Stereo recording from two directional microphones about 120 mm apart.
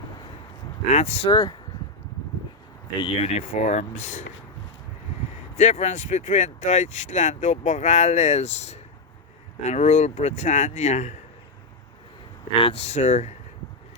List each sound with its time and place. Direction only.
0.9 s speech: 70° left (ahead or behind)
1.3 s speech: 35° left (ahead or behind)
3.0 s speech: 50° left (ahead or behind); by 4.2 s 85° left
5.5 s speech: 70° left (ahead or behind)
12.6 s speech: 60° left (ahead or behind)